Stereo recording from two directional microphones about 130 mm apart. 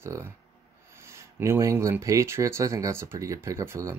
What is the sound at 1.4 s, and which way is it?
Speech, 20° right (ahead or behind).